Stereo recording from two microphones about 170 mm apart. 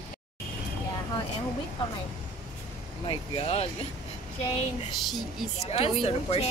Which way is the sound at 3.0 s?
30° left (ahead or behind).